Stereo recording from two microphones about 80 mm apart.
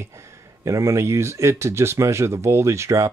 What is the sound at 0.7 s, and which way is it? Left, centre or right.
Speech, right.